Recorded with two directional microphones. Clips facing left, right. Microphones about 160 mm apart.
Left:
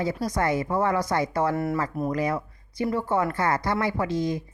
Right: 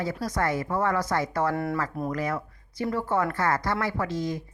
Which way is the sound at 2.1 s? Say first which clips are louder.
Left 3 dB; 15° left (ahead or behind).